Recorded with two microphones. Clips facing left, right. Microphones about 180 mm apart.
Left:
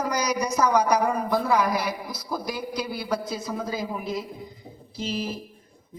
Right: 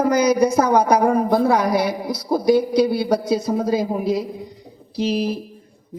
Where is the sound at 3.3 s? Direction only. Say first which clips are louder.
Right 10 dB; 30° right (ahead or behind).